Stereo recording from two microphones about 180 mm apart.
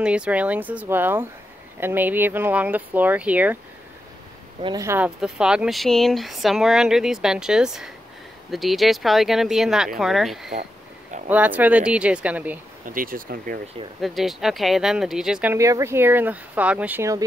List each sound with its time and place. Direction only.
0.0 s speech: 5° right (ahead or behind)
4.6 s speech: 25° right (ahead or behind)
4.8 s speech: 10° right (ahead or behind)
12.8 s speech: 50° right (ahead or behind)
14.0 s speech: centre (ahead or behind)
15.5 s speech: 15° right (ahead or behind)